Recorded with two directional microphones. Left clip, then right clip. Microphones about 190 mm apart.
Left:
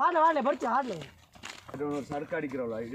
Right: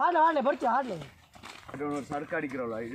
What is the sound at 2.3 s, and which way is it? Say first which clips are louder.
Speech: even; 45° left (ahead or behind).